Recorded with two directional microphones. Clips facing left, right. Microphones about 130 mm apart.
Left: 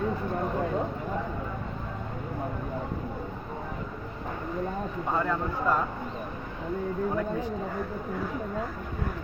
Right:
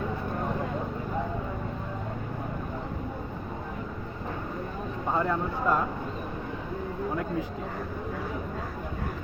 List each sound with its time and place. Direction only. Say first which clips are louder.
5.1 s speech: right 1 dB; 15° right (ahead or behind)